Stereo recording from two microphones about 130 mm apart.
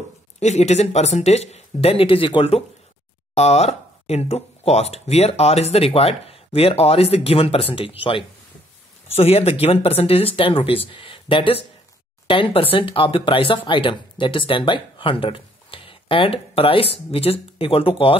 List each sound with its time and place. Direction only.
0.4 s speech: 60° left (ahead or behind)